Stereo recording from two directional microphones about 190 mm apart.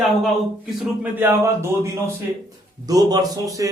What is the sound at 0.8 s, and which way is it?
Speech, 10° right (ahead or behind).